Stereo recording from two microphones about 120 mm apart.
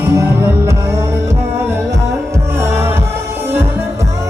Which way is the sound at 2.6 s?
20° right (ahead or behind).